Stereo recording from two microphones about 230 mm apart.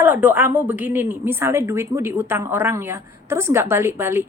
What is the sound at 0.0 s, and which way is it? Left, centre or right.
A woman's voice, centre.